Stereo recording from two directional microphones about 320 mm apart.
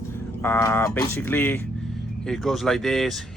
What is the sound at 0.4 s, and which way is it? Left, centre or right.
Speech, centre.